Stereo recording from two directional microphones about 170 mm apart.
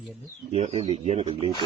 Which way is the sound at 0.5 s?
35° right (ahead or behind).